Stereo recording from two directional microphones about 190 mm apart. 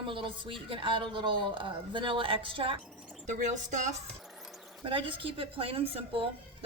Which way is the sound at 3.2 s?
40° right (ahead or behind).